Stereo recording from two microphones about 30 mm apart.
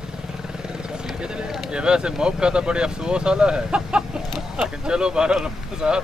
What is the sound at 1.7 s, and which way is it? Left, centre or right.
Speech, right.